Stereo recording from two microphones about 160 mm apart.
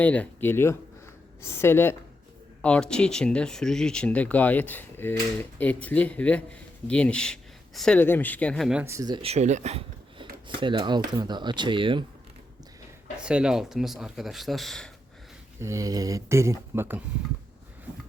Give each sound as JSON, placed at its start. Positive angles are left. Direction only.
{"t": 0.0, "sound": "speech", "side_deg": 10}
{"t": 8.8, "sound": "speech", "side_deg": -20}
{"t": 9.2, "sound": "speech", "side_deg": -45}
{"t": 10.6, "sound": "speech", "side_deg": -30}
{"t": 13.2, "sound": "speech", "side_deg": -5}
{"t": 15.6, "sound": "speech", "side_deg": -20}